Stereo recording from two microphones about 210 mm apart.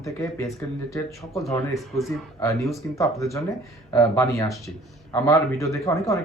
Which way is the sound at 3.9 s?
15° left (ahead or behind).